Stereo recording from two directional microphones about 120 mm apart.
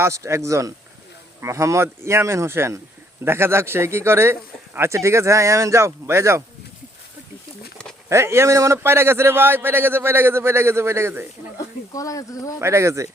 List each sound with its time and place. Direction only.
0.0 s a man's voice: 25° right (ahead or behind)
8.1 s a man's voice: 20° right (ahead or behind)
11.5 s speech: 30° left (ahead or behind)
12.5 s a man's voice: 25° right (ahead or behind)